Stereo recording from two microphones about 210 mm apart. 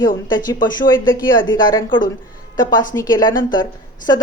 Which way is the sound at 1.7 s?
20° left (ahead or behind).